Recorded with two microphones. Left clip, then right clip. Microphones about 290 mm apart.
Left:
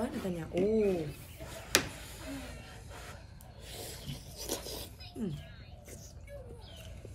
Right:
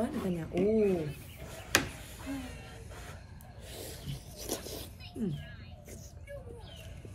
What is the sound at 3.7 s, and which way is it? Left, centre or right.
Wild animals, centre.